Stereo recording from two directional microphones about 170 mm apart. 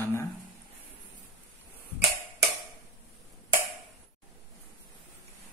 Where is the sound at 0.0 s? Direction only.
15° left (ahead or behind).